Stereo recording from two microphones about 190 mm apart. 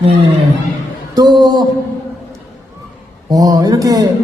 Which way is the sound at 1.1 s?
20° right (ahead or behind).